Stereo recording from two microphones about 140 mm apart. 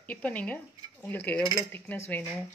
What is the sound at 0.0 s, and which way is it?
Speech, 10° left (ahead or behind).